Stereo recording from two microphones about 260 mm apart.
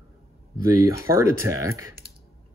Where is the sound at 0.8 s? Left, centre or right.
Centre.